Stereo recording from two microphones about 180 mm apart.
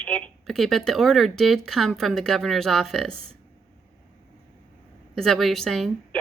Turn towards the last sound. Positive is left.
turn(degrees=0)  # may be behind; listen again after turning